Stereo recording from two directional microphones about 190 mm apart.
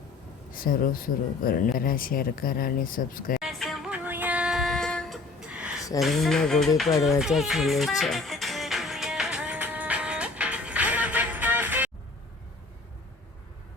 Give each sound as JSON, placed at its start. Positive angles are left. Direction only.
{"t": 0.5, "sound": "speech", "side_deg": 50}
{"t": 3.4, "sound": "music", "side_deg": 0}